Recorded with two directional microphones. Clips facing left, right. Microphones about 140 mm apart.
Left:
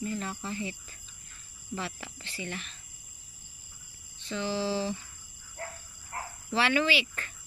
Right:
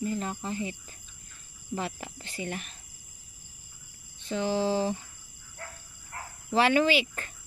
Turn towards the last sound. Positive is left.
turn(degrees=-40)  # may be behind; listen again after turning